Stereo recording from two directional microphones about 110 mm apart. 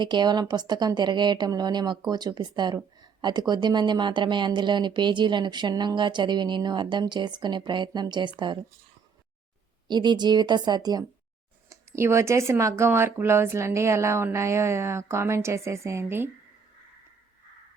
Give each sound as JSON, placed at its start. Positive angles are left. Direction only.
{"t": 0.0, "sound": "a woman's voice", "side_deg": -45}
{"t": 9.9, "sound": "a woman's voice", "side_deg": -40}
{"t": 11.7, "sound": "speech", "side_deg": -25}